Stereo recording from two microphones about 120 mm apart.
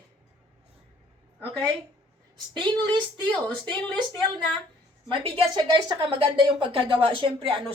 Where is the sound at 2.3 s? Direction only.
40° right (ahead or behind).